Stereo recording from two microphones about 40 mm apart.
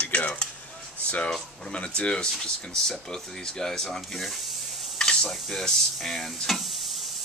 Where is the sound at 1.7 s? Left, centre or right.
Left.